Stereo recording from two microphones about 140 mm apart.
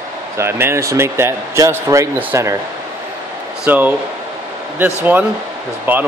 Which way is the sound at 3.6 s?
10° right (ahead or behind).